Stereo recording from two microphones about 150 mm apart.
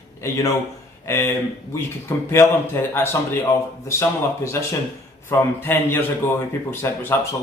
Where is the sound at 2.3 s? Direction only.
15° left (ahead or behind).